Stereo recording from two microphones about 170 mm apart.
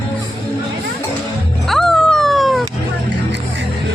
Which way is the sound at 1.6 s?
Centre (ahead or behind).